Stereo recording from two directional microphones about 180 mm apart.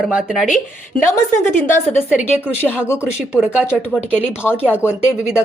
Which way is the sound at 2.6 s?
10° left (ahead or behind).